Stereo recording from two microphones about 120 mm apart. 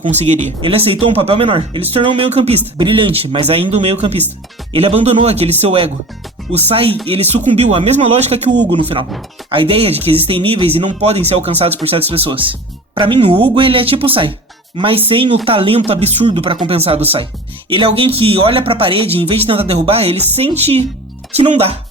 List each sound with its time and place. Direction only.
0.1 s speech: 75° right (ahead or behind)
0.6 s speech: 50° right (ahead or behind)
2.7 s speech: 45° right (ahead or behind)
7.4 s speech: 65° right (ahead or behind)
8.8 s speech: 50° right (ahead or behind)
21.3 s speech: 85° right